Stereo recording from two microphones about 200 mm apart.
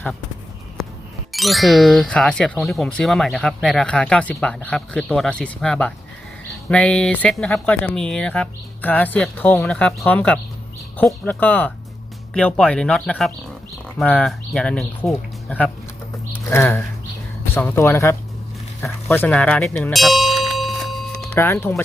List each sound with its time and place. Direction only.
0.8 s music: centre (ahead or behind)
1.3 s speech: centre (ahead or behind)
19.0 s tubular bells: 5° left (ahead or behind)
21.3 s speech: 10° left (ahead or behind)